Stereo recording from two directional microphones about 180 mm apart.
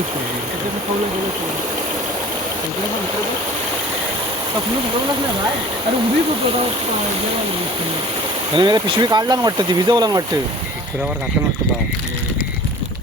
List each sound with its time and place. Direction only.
8.5 s speech: 25° right (ahead or behind)